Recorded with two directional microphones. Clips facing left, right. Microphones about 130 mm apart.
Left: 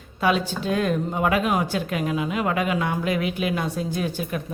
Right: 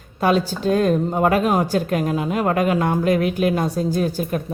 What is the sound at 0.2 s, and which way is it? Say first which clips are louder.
A woman's voice: right 4 dB; 40° right (ahead or behind).